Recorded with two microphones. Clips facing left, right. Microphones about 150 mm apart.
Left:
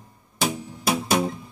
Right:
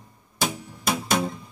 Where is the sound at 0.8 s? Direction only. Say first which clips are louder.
Left 2 dB; 10° left (ahead or behind).